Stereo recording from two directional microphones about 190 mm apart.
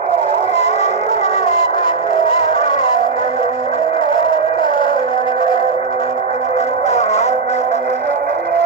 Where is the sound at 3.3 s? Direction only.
30° left (ahead or behind).